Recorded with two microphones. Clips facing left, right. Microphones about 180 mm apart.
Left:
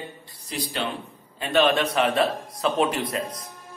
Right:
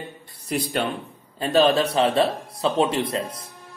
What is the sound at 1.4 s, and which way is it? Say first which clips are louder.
Speech: right 3 dB; 35° right (ahead or behind).